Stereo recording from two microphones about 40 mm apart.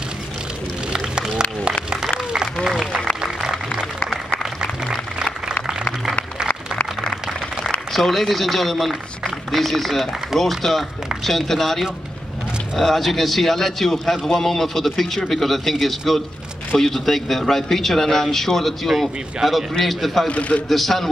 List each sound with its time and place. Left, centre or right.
0.9 s music: centre
2.6 s applause: centre
7.9 s a man's voice: centre
20.2 s speech: left
20.6 s a man's voice: centre